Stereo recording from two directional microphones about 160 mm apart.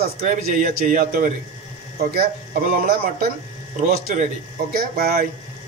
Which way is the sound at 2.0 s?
70° right (ahead or behind).